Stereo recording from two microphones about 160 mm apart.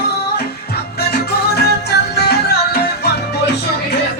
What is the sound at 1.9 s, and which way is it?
Music, 90° left.